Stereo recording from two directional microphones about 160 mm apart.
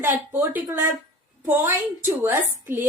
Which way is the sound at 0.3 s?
15° right (ahead or behind).